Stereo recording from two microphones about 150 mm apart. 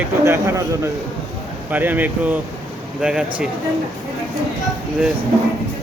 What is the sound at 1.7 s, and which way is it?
Speech, 10° right (ahead or behind).